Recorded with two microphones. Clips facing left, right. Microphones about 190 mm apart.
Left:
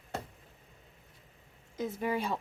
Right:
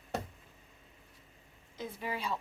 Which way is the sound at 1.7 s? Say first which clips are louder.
Left 6 dB; 50° left (ahead or behind).